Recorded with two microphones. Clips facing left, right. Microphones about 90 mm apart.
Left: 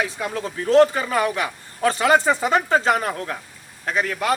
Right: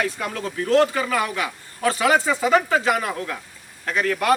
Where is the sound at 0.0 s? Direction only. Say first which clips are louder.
Even; 20° left (ahead or behind).